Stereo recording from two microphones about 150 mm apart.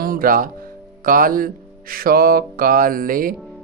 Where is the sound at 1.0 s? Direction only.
70° right (ahead or behind).